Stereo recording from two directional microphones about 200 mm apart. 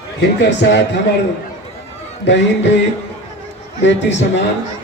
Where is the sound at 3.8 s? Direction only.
65° left (ahead or behind).